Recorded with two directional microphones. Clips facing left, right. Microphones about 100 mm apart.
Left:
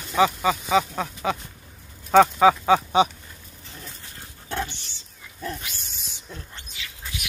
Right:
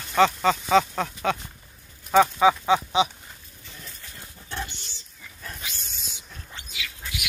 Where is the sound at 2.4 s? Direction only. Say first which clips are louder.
Left 2 dB; 40° left (ahead or behind).